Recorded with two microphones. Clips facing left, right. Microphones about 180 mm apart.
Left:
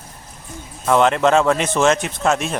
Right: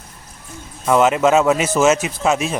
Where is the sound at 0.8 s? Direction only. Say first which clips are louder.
Right 1 dB; 5° right (ahead or behind).